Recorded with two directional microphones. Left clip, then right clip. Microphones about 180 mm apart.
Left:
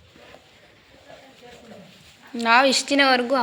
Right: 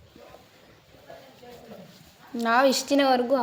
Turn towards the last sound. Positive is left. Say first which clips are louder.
# left 3 dB
turn(degrees=5)  # may be behind; listen again after turning